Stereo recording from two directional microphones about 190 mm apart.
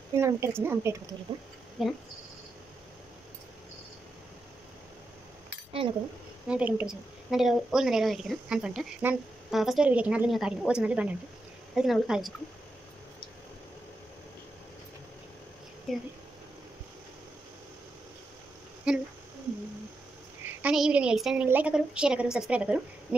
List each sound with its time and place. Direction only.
0.1 s speech: 15° right (ahead or behind)
1.8 s a woman's voice: centre (ahead or behind)
5.8 s speech: 25° right (ahead or behind)
6.4 s a woman's voice: 5° right (ahead or behind)
15.9 s a woman's voice: centre (ahead or behind)
18.9 s speech: 5° right (ahead or behind)
20.4 s a woman's voice: 5° right (ahead or behind)